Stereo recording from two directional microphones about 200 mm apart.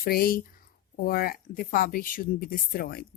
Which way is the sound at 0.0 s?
50° left (ahead or behind).